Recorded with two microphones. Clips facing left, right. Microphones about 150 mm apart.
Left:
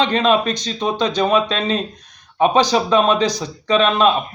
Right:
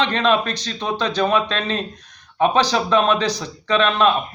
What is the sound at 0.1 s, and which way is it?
Speech, 10° left (ahead or behind).